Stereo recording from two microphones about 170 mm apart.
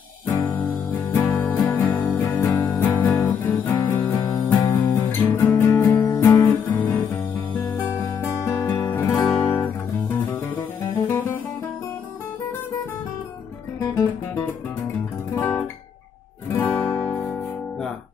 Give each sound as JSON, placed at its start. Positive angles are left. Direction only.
{"t": 1.1, "sound": "music", "side_deg": 10}
{"t": 4.0, "sound": "music", "side_deg": 25}
{"t": 4.5, "sound": "music", "side_deg": 10}
{"t": 9.2, "sound": "guitar", "side_deg": 5}
{"t": 11.1, "sound": "music", "side_deg": 15}
{"t": 15.3, "sound": "guitar", "side_deg": 10}